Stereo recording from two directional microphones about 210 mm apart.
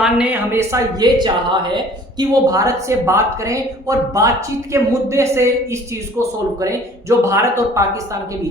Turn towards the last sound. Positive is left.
turn(degrees=-15)  # may be behind; listen again after turning